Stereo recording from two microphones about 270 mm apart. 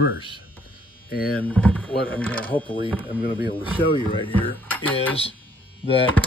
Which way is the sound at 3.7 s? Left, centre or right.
Centre.